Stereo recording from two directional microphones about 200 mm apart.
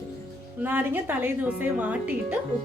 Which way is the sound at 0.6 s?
10° right (ahead or behind).